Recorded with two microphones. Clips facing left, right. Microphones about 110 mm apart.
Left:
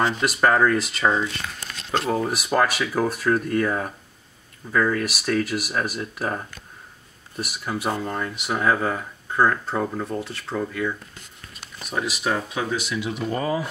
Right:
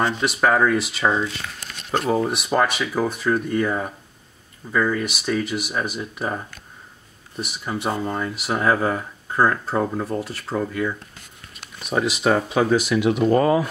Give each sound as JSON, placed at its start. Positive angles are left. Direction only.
{"t": 0.0, "sound": "speech", "side_deg": 0}
{"t": 12.6, "sound": "speech", "side_deg": -50}